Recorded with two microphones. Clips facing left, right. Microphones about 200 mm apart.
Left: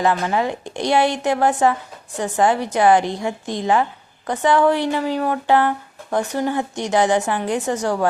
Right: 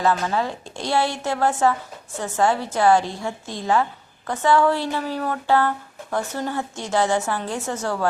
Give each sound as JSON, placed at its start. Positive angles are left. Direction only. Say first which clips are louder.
{"t": 0.0, "sound": "speech", "louder": "left 2 dB", "side_deg": 15}